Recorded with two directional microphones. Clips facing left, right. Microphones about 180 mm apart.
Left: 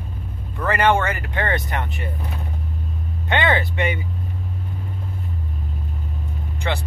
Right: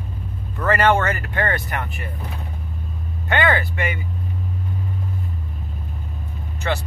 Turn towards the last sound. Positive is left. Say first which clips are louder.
# right 1 dB
turn(degrees=20)  # may be behind; listen again after turning